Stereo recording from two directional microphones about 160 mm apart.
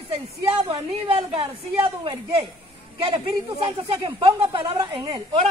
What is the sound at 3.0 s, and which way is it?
A man's voice, 30° right (ahead or behind).